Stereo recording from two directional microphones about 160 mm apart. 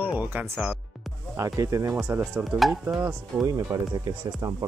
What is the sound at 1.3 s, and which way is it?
Speech, 20° right (ahead or behind).